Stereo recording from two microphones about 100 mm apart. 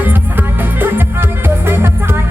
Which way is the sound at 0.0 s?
20° right (ahead or behind).